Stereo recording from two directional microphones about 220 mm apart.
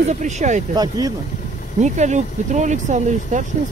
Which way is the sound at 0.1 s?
35° right (ahead or behind).